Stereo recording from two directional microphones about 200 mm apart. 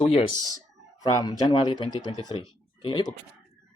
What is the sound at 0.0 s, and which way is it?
Speech, 30° left (ahead or behind).